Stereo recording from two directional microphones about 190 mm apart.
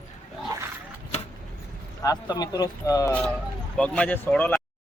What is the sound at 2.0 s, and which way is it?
Speech, 20° left (ahead or behind).